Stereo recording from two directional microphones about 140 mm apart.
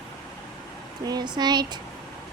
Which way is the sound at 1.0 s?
30° right (ahead or behind).